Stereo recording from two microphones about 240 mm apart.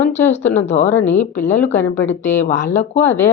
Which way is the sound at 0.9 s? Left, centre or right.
Centre.